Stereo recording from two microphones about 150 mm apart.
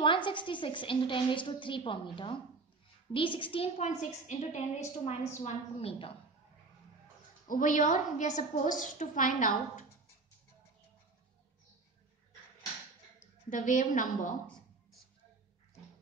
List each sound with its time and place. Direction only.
0.0 s a woman's voice: 35° left (ahead or behind)
7.4 s a woman's voice: 60° left (ahead or behind)
13.5 s a woman's voice: 60° left (ahead or behind)